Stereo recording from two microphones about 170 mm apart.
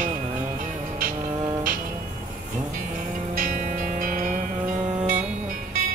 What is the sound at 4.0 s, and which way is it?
Music, 50° right (ahead or behind).